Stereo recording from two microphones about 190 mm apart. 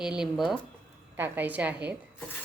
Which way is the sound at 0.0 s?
5° right (ahead or behind).